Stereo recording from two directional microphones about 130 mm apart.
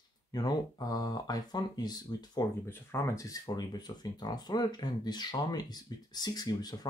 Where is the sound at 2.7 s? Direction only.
20° left (ahead or behind).